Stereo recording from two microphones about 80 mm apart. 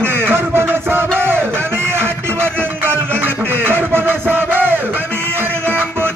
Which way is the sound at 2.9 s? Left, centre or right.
Right.